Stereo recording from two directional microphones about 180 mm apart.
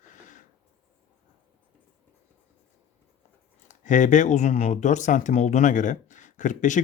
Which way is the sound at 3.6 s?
45° left (ahead or behind).